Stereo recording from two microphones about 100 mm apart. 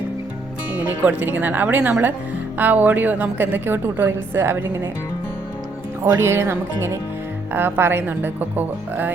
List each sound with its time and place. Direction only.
0.7 s a woman's voice: 15° right (ahead or behind)
6.2 s a woman's voice: 25° right (ahead or behind)